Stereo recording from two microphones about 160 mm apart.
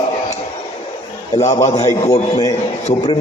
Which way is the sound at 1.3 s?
45° left (ahead or behind).